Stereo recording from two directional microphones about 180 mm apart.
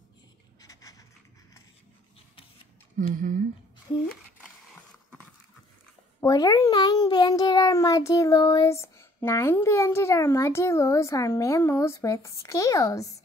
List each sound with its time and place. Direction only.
0.6 s writing: 20° left (ahead or behind)
3.0 s speech: 45° right (ahead or behind)
6.2 s a child's voice: 20° left (ahead or behind)